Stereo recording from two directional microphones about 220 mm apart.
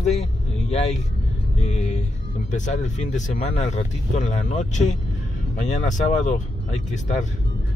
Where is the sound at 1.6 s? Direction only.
30° left (ahead or behind).